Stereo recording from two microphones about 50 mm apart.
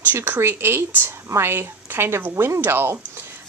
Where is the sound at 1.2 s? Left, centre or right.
Right.